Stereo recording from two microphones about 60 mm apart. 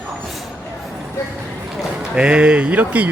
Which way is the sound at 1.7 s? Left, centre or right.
Centre.